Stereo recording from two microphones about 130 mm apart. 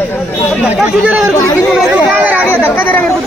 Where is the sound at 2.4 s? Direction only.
15° left (ahead or behind).